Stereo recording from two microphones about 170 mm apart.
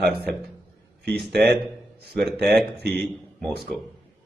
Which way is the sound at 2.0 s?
65° right (ahead or behind).